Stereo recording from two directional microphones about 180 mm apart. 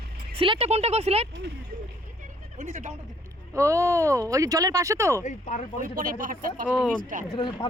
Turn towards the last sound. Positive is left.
turn(degrees=30)  # may be behind; listen again after turning